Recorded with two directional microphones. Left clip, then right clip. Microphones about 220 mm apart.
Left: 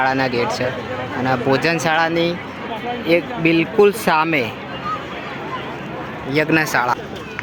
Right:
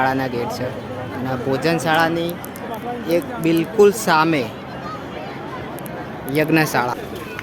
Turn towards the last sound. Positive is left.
turn(degrees=-15)  # may be behind; listen again after turning